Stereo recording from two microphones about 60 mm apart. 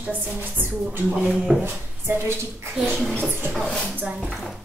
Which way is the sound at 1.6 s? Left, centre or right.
Right.